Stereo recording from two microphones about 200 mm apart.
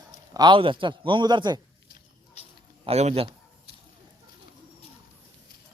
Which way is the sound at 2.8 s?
30° right (ahead or behind).